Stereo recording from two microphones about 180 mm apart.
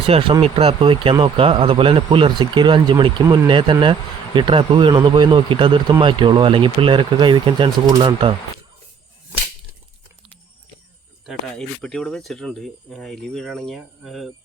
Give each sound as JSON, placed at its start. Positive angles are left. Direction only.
{"t": 0.0, "sound": "speech", "side_deg": -30}
{"t": 11.3, "sound": "speech", "side_deg": 5}